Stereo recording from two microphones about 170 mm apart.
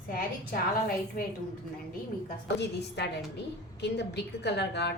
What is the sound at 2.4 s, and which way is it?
A woman's voice, 80° left.